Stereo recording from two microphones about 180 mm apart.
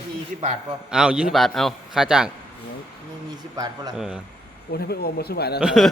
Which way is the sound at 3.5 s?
20° right (ahead or behind).